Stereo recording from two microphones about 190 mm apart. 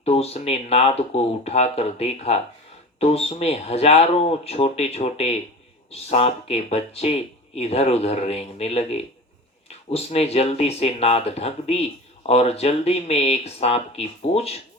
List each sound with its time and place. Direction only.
0.0 s speech: 35° left (ahead or behind)